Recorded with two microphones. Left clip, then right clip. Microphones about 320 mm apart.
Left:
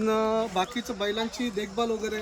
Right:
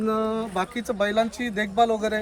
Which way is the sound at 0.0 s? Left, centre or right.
Left.